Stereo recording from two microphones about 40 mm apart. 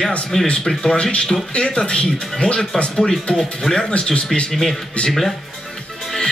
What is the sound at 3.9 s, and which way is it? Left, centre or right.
Speech, left.